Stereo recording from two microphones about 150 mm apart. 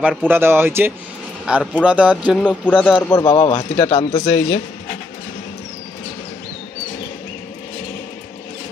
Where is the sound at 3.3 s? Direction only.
40° left (ahead or behind).